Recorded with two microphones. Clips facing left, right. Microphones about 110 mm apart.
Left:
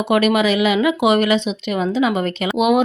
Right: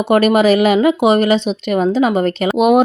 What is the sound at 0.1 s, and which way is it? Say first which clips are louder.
Speech: right 5 dB; 40° right (ahead or behind).